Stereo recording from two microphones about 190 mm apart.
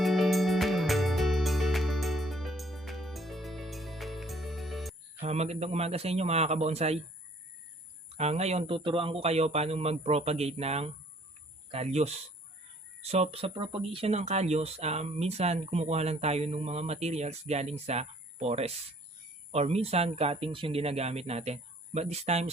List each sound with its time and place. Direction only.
0.0 s music: centre (ahead or behind)
5.2 s speech: 35° right (ahead or behind)
8.1 s speech: 35° right (ahead or behind)